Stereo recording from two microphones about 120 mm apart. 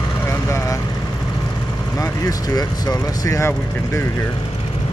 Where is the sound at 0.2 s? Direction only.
25° left (ahead or behind).